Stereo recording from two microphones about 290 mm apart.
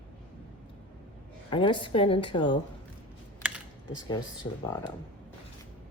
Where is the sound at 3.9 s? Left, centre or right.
Centre.